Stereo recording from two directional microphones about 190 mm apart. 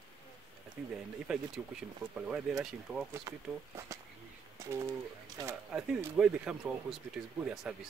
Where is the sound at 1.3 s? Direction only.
5° right (ahead or behind).